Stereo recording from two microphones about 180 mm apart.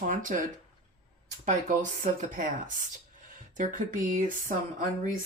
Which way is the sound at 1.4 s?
45° right (ahead or behind).